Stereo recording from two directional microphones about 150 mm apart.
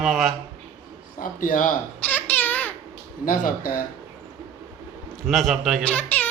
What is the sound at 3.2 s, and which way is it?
Speech, 70° left (ahead or behind).